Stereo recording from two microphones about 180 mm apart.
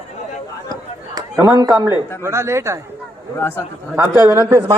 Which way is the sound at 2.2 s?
15° right (ahead or behind).